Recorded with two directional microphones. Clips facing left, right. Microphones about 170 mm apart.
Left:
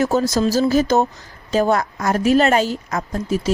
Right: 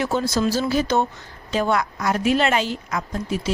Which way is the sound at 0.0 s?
40° left (ahead or behind).